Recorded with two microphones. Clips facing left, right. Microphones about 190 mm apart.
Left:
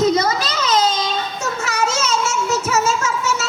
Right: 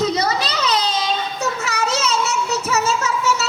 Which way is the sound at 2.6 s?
35° right (ahead or behind).